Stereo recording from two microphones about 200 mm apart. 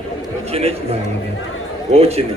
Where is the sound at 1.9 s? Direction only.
30° right (ahead or behind).